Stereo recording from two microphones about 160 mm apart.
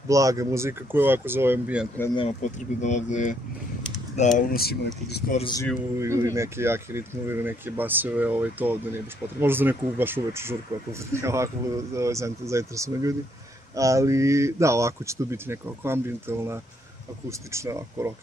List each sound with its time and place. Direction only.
0.1 s speech: 20° right (ahead or behind)
2.1 s speech: 40° left (ahead or behind); by 5.2 s 85° left
5.4 s speech: 25° left (ahead or behind)
5.9 s speech: 20° right (ahead or behind)